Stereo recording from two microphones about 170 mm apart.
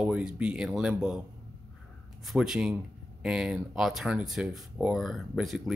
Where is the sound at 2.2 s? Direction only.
5° right (ahead or behind).